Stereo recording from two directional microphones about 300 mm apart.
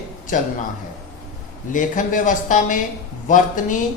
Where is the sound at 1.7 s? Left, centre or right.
Left.